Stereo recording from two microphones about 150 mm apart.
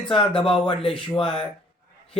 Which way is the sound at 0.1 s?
35° left (ahead or behind).